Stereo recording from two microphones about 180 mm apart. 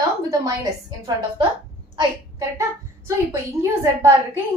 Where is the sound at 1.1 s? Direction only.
25° right (ahead or behind).